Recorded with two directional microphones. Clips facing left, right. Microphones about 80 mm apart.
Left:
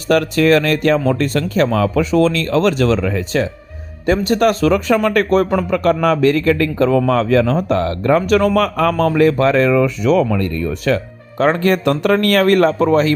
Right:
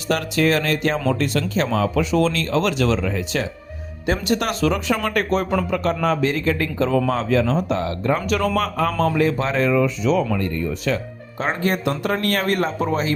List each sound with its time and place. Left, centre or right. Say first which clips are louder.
0.1 s speech: left 7 dB; left
8.5 s speech: left 6 dB; left